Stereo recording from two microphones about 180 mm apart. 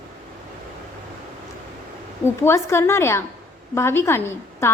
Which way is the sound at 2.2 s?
15° left (ahead or behind).